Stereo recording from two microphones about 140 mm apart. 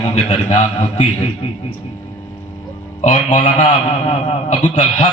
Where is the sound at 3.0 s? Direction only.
60° left (ahead or behind).